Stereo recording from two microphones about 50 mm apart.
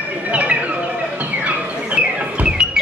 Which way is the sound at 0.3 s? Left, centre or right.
Right.